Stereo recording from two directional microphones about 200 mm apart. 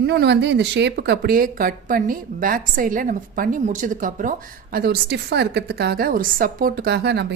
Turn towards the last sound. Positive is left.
turn(degrees=-55)  # may be behind; listen again after turning